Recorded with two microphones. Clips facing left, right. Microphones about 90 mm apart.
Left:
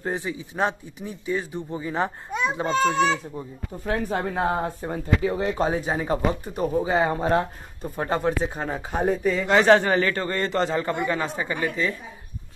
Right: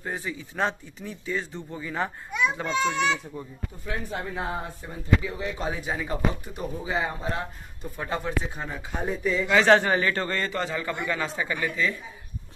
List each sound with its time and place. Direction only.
0.1 s speech: 20° left (ahead or behind)
2.6 s speech: 40° left (ahead or behind)
3.8 s speech: 50° left (ahead or behind)
7.8 s speech: 40° left (ahead or behind)
8.9 s speech: 50° left (ahead or behind)
9.8 s speech: 25° right (ahead or behind)
10.2 s speech: 25° left (ahead or behind)
10.5 s speech: 35° left (ahead or behind)